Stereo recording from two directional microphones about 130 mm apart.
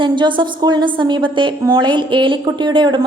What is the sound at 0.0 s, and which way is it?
A woman's voice, 40° right (ahead or behind).